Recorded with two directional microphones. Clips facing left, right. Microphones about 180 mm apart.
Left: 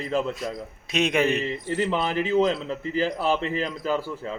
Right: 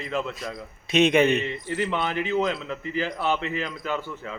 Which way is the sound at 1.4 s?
35° left (ahead or behind).